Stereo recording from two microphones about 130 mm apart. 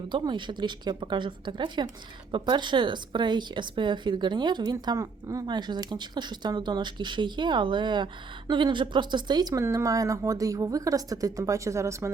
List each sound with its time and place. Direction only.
0.1 s a woman's voice: 35° right (ahead or behind)